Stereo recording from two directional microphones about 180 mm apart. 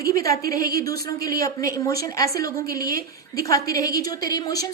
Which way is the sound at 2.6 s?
55° right (ahead or behind).